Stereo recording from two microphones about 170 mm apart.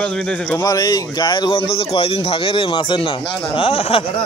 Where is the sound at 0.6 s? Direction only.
20° left (ahead or behind).